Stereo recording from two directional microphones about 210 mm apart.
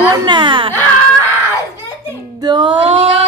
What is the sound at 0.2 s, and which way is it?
Speech, 20° right (ahead or behind).